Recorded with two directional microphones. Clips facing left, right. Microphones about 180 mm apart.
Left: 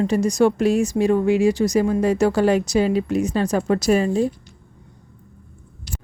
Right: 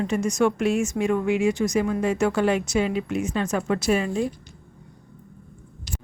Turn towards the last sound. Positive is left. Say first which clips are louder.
# left 5 dB
turn(degrees=30)  # may be behind; listen again after turning